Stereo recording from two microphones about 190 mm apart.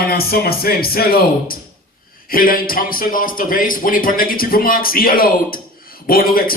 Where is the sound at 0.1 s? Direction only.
55° left (ahead or behind).